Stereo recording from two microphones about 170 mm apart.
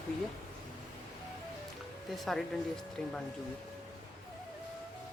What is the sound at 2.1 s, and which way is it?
Speech, centre (ahead or behind).